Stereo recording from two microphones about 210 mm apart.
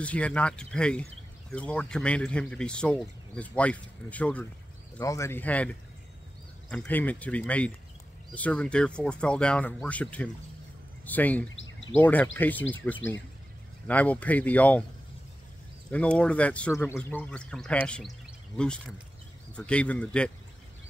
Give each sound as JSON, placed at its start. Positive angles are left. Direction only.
{"t": 0.0, "sound": "speech", "side_deg": 5}
{"t": 11.4, "sound": "bird", "side_deg": 65}
{"t": 12.0, "sound": "speech", "side_deg": 10}
{"t": 15.9, "sound": "speech", "side_deg": 5}